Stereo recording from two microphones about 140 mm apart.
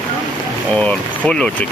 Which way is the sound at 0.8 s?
5° left (ahead or behind).